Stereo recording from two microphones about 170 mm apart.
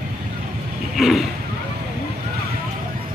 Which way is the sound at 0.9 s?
Centre (ahead or behind).